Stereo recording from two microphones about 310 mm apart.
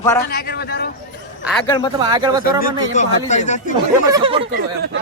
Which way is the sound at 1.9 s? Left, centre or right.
Centre.